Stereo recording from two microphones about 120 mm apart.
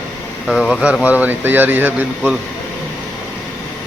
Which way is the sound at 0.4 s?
5° left (ahead or behind).